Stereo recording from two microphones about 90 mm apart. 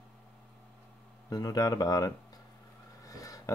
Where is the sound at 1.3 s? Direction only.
45° left (ahead or behind).